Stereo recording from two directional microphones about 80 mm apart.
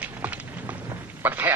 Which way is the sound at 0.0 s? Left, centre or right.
Centre.